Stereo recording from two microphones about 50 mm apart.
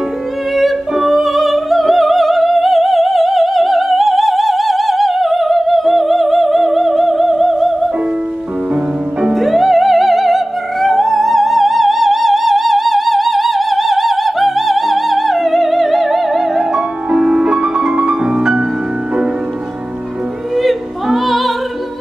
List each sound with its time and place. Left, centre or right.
0.6 s music: centre
9.2 s music: centre
16.7 s music: centre
20.5 s opera: centre